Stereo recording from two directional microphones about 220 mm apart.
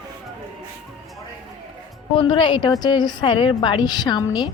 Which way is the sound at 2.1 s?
20° left (ahead or behind).